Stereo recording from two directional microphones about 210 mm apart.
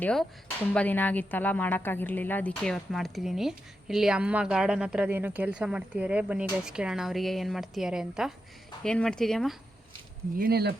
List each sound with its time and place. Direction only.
0.0 s speech: 5° left (ahead or behind)
10.3 s speech: 45° right (ahead or behind)